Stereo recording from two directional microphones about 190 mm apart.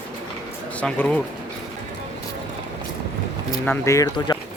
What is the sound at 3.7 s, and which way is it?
Speech, 15° left (ahead or behind).